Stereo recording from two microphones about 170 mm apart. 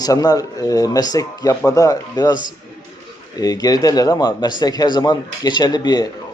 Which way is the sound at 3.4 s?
20° left (ahead or behind).